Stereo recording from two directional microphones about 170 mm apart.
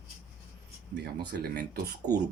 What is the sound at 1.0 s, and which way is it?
Speech, 70° right (ahead or behind).